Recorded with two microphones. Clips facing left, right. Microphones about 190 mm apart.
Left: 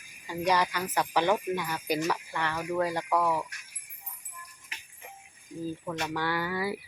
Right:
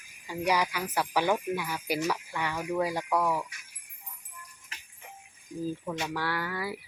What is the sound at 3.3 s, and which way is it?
Mantra, centre (ahead or behind).